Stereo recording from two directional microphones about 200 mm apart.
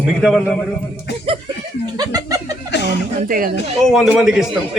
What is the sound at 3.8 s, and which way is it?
Speech, centre (ahead or behind).